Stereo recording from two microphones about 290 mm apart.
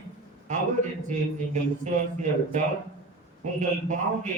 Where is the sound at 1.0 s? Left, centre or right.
Right.